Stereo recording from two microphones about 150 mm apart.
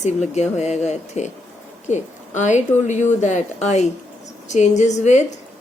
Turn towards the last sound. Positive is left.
turn(degrees=50)  # may be behind; listen again after turning